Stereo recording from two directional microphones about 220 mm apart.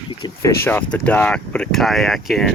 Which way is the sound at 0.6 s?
10° left (ahead or behind).